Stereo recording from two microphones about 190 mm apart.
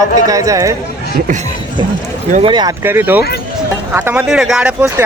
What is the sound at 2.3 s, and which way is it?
Speech, 30° right (ahead or behind).